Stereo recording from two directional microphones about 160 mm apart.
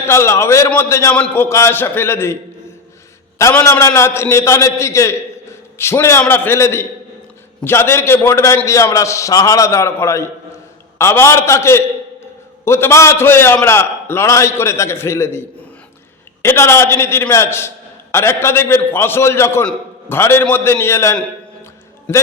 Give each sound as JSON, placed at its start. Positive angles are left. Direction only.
{"t": 0.1, "sound": "a man's voice", "side_deg": 15}